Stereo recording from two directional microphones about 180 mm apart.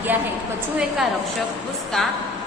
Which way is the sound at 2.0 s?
5° left (ahead or behind).